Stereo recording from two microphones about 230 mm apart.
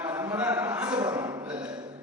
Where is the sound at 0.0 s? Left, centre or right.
Centre.